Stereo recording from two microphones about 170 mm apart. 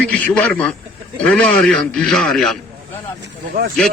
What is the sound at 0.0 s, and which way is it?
A man's voice, 5° left (ahead or behind).